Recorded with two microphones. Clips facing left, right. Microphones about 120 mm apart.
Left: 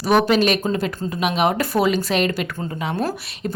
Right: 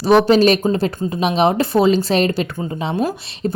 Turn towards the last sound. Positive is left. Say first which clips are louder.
# right 4 dB
turn(degrees=-30)  # may be behind; listen again after turning